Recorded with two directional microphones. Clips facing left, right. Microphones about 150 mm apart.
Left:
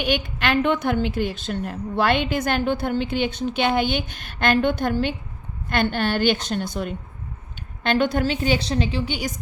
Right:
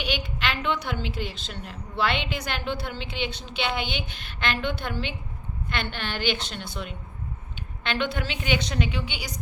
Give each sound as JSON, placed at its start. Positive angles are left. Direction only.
{"t": 0.0, "sound": "a woman's voice", "side_deg": 50}